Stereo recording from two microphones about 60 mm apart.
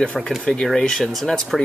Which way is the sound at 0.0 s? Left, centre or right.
Centre.